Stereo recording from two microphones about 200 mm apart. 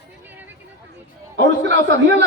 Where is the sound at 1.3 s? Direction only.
60° right (ahead or behind).